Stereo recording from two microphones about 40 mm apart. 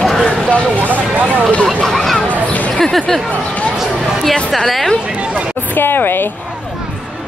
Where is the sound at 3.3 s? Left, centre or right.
Left.